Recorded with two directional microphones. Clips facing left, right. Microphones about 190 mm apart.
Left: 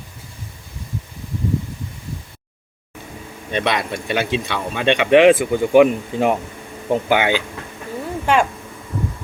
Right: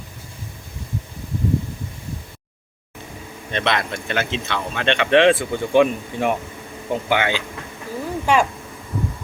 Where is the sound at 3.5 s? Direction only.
10° left (ahead or behind).